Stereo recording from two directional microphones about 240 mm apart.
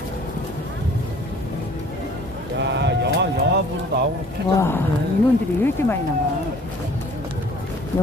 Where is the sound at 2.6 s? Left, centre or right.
Right.